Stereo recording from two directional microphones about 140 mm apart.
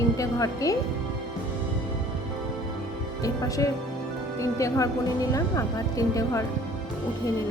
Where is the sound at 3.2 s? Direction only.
25° left (ahead or behind).